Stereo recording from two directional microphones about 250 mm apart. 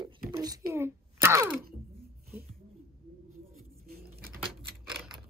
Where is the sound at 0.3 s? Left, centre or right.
Centre.